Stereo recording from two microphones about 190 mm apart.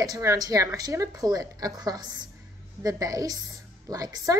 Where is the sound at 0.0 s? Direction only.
15° right (ahead or behind).